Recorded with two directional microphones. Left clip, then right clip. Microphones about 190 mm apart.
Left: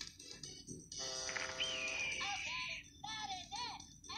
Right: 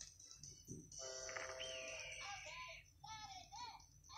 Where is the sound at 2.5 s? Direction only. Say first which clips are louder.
Left 10 dB; 35° left (ahead or behind).